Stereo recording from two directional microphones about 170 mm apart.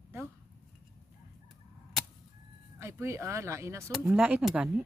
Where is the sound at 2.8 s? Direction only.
15° right (ahead or behind).